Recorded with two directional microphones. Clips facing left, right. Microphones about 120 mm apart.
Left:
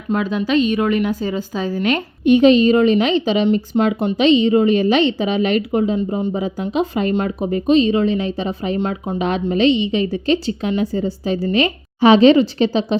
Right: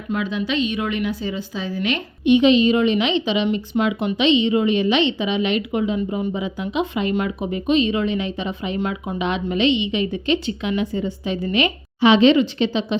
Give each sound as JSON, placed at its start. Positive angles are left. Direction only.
{"t": 0.1, "sound": "speech", "side_deg": 40}